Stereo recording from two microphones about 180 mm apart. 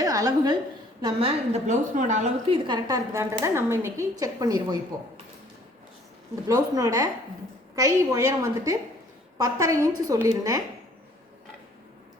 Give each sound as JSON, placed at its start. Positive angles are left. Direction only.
{"t": 0.0, "sound": "a woman's voice", "side_deg": -20}
{"t": 1.0, "sound": "a woman's voice", "side_deg": -35}
{"t": 2.5, "sound": "a woman's voice", "side_deg": -25}
{"t": 6.5, "sound": "a woman's voice", "side_deg": -20}